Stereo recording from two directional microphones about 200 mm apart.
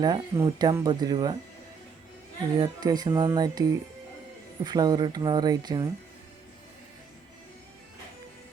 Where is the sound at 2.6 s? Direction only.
20° right (ahead or behind).